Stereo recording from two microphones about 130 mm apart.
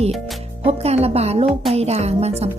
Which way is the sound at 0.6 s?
50° right (ahead or behind).